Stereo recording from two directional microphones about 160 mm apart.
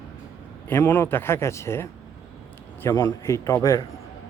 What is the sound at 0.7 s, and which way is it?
A man's voice, 15° left (ahead or behind).